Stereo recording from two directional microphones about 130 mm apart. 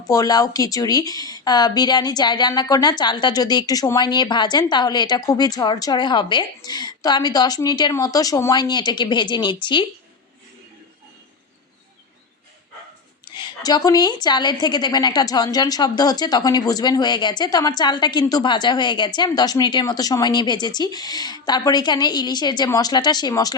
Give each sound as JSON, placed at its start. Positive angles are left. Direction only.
{"t": 0.1, "sound": "a woman's voice", "side_deg": 30}
{"t": 13.2, "sound": "a woman's voice", "side_deg": 35}